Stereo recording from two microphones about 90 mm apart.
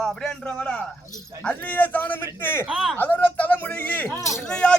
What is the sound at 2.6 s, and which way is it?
Speech, centre (ahead or behind).